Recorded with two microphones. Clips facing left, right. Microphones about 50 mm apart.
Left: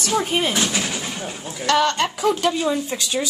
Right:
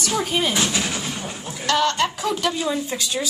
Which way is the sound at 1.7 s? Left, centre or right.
Left.